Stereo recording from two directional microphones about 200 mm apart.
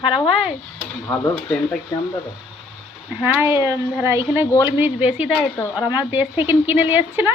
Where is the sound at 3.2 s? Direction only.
10° right (ahead or behind).